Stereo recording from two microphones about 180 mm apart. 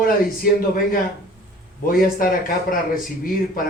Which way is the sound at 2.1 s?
55° left (ahead or behind).